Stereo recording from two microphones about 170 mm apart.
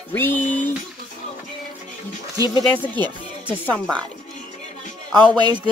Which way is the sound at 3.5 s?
10° left (ahead or behind).